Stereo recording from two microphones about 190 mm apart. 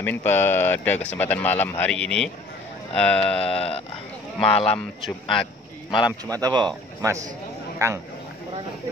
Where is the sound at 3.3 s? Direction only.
30° left (ahead or behind).